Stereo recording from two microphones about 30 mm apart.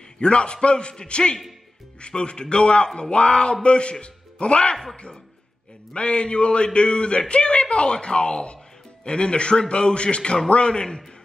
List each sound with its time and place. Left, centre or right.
0.2 s a man's voice: left